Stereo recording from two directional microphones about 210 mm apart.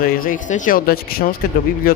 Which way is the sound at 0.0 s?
45° left (ahead or behind).